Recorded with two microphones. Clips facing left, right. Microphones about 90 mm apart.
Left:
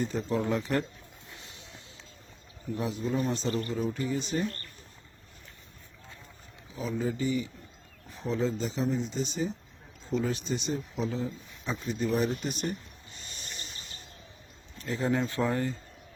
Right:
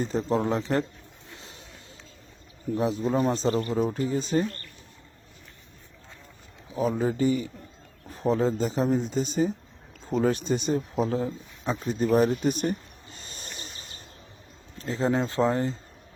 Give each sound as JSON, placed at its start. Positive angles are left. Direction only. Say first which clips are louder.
{"t": 0.0, "sound": "a man's voice", "louder": "right 4 dB", "side_deg": -35}
{"t": 1.4, "sound": "a sound", "louder": "right 3 dB", "side_deg": -40}
{"t": 2.7, "sound": "a man's voice", "louder": "right 6 dB", "side_deg": -35}
{"t": 6.7, "sound": "speech", "louder": "right 6 dB", "side_deg": -45}
{"t": 13.1, "sound": "a sound", "louder": "right 2 dB", "side_deg": -40}
{"t": 14.8, "sound": "speech", "louder": "right 3 dB", "side_deg": -30}